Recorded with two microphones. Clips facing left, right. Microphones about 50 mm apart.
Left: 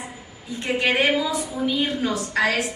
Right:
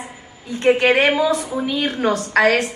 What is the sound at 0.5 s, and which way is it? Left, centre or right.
A woman's voice, right.